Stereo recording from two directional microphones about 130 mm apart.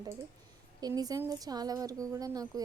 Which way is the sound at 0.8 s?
30° right (ahead or behind).